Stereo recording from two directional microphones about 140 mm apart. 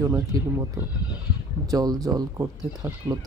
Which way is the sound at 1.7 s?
25° right (ahead or behind).